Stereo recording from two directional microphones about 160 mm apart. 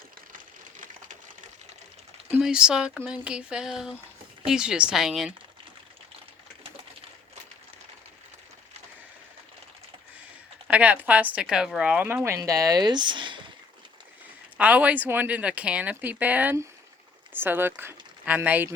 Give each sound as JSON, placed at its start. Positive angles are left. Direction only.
{"t": 0.3, "sound": "a sound", "side_deg": -55}
{"t": 2.3, "sound": "speech", "side_deg": -5}
{"t": 10.7, "sound": "a woman's voice", "side_deg": -10}
{"t": 14.6, "sound": "a woman's voice", "side_deg": -10}